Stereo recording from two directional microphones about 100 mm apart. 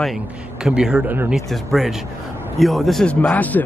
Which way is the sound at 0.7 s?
5° right (ahead or behind).